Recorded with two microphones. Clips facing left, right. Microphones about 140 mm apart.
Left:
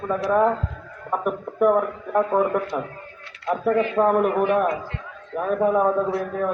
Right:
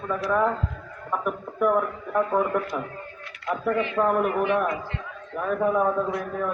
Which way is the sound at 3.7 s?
40° left (ahead or behind).